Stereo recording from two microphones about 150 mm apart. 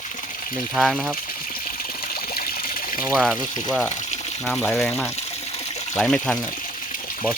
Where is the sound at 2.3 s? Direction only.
75° left (ahead or behind).